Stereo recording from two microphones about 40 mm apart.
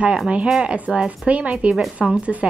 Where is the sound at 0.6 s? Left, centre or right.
Right.